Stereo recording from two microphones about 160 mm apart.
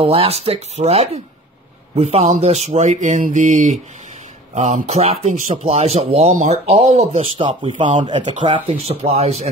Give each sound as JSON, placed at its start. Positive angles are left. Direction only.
{"t": 0.0, "sound": "speech", "side_deg": -35}
{"t": 8.2, "sound": "speech", "side_deg": -50}
{"t": 8.5, "sound": "speech", "side_deg": -35}